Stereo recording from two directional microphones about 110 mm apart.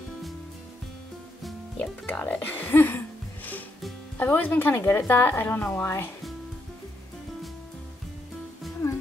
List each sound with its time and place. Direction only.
2.0 s speech: 15° left (ahead or behind)
4.2 s speech: 15° left (ahead or behind)
8.8 s music: 30° left (ahead or behind)